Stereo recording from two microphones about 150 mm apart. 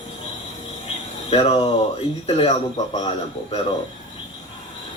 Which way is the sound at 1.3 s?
35° left (ahead or behind).